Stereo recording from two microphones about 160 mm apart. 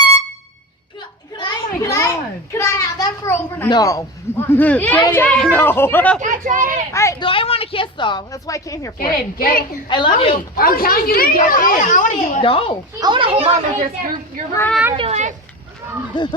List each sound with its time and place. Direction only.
1.4 s a sound: 20° left (ahead or behind)
3.7 s a man's voice: 20° left (ahead or behind)
6.1 s speech: 50° right (ahead or behind)
6.9 s a woman's voice: 20° left (ahead or behind)
7.2 s a woman's voice: 35° left (ahead or behind)
9.0 s a woman's voice: 65° left (ahead or behind)
9.9 s speech: 30° left (ahead or behind)
10.5 s a woman's voice: 65° left (ahead or behind)
12.4 s speech: 35° left (ahead or behind)
13.0 s a woman's voice: 30° right (ahead or behind)
13.7 s speech: 55° right (ahead or behind)
14.9 s speech: 40° right (ahead or behind)
16.1 s a woman's voice: 25° left (ahead or behind)